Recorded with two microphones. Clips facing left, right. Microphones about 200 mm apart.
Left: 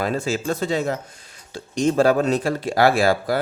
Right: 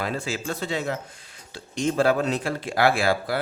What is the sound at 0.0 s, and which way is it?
Speech, 45° left (ahead or behind).